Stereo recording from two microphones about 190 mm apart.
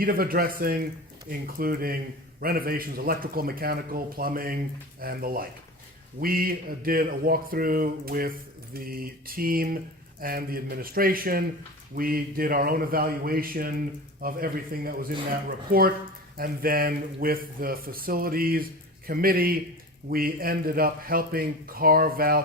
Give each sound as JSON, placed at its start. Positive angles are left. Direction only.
{"t": 0.0, "sound": "speech", "side_deg": -50}